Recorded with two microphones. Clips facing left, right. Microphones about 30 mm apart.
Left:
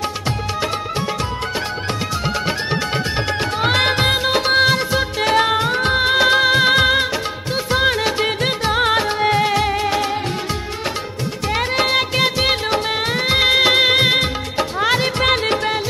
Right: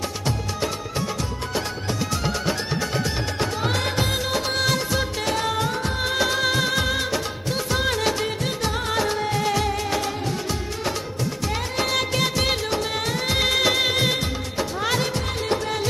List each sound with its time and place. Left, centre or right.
3.6 s music: left
4.6 s music: left
7.7 s music: left
11.5 s music: left
13.3 s music of bollywood: left
15.2 s music: left